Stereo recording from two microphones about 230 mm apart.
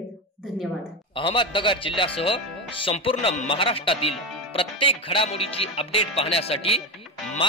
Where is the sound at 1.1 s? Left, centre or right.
Left.